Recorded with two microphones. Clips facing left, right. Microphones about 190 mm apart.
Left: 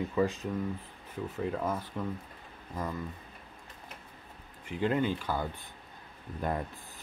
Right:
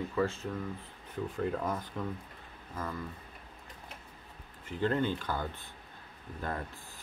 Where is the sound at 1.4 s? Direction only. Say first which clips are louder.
Left 1 dB; centre (ahead or behind).